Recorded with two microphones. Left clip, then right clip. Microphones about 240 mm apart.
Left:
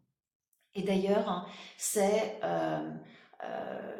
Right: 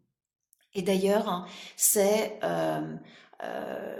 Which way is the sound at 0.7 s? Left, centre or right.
Right.